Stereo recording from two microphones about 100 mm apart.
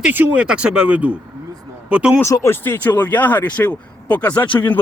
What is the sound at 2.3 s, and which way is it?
Speech, 25° left (ahead or behind).